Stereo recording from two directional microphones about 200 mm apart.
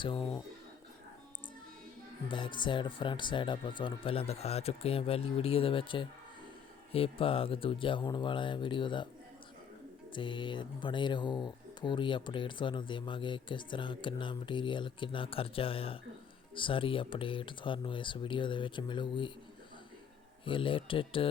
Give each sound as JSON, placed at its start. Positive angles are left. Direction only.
{"t": 0.0, "sound": "speech", "side_deg": 25}
{"t": 2.3, "sound": "speech", "side_deg": 25}
{"t": 10.2, "sound": "speech", "side_deg": 25}
{"t": 20.4, "sound": "speech", "side_deg": 25}